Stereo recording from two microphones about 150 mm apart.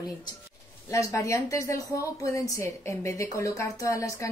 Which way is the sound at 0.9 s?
20° left (ahead or behind).